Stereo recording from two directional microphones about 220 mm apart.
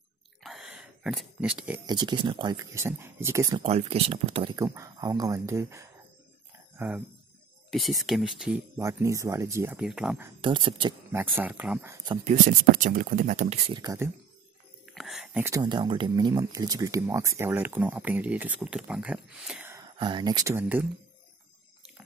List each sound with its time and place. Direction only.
0.4 s a sound: centre (ahead or behind)
1.9 s speech: 20° right (ahead or behind)
3.6 s speech: 30° right (ahead or behind)
8.0 s speech: centre (ahead or behind)
10.4 s speech: 25° right (ahead or behind)
11.1 s speech: 10° right (ahead or behind)
12.3 s speech: 35° right (ahead or behind); by 14.1 s 15° right (ahead or behind)
14.9 s speech: centre (ahead or behind)
19.8 s speech: 20° right (ahead or behind)